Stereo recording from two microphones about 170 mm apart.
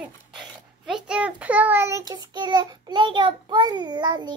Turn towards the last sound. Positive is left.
turn(degrees=-25)  # may be behind; listen again after turning